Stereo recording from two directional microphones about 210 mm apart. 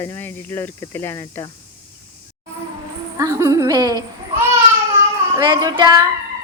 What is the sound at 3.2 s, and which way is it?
Speech, 15° right (ahead or behind).